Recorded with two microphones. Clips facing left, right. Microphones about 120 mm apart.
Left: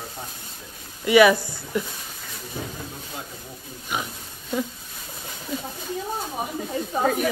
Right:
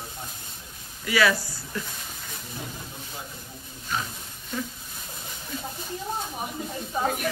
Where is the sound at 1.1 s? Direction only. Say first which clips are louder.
Left 8 dB; 20° left (ahead or behind).